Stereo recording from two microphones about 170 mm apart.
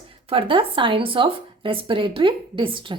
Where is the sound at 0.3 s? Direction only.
30° right (ahead or behind).